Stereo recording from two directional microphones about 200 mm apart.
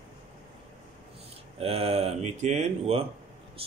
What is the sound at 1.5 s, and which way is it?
A man's voice, 30° right (ahead or behind).